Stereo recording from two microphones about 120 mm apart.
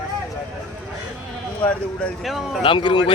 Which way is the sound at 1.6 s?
10° left (ahead or behind).